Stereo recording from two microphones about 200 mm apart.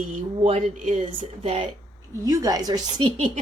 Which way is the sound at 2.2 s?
15° right (ahead or behind).